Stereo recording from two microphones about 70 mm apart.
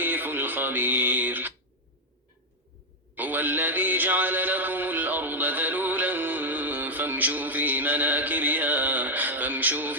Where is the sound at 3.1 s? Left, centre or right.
Right.